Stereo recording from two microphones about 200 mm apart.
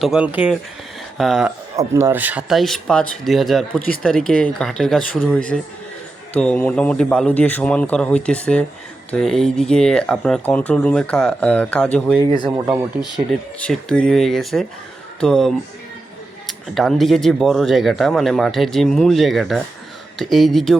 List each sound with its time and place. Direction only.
0.0 s speech: 5° right (ahead or behind)
1.7 s speech: 15° right (ahead or behind); by 12.1 s 5° left (ahead or behind)
12.5 s speech: 15° right (ahead or behind)
13.6 s speech: 5° left (ahead or behind)